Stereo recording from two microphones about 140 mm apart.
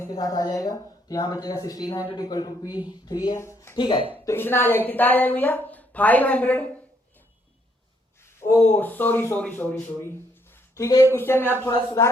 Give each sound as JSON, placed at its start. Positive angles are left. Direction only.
{"t": 0.0, "sound": "speech", "side_deg": 25}
{"t": 3.8, "sound": "speech", "side_deg": 35}
{"t": 4.3, "sound": "a woman's voice", "side_deg": 15}
{"t": 8.4, "sound": "a woman's voice", "side_deg": 15}